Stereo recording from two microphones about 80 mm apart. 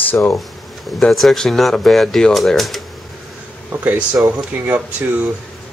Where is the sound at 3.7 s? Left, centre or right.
Right.